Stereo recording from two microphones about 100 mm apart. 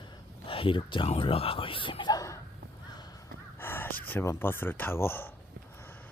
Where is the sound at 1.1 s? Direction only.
65° left (ahead or behind).